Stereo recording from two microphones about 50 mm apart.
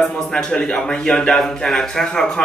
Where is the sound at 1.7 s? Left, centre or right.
Centre.